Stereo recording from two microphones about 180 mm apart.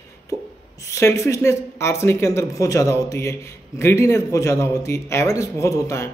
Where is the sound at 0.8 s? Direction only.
15° left (ahead or behind).